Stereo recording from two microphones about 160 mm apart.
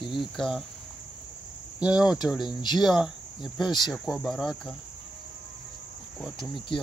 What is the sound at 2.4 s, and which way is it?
Speech, 25° left (ahead or behind).